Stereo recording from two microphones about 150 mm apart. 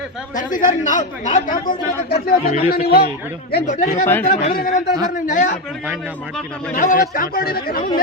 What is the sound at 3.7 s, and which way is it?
Speech, 55° left (ahead or behind).